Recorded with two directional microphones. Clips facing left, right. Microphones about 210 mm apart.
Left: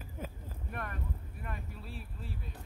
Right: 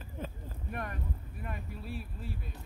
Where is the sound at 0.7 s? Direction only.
15° right (ahead or behind).